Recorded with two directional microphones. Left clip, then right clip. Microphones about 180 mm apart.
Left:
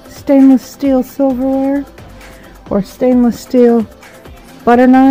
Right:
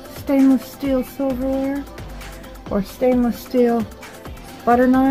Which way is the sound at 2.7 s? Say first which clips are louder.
Left 6 dB; 60° left (ahead or behind).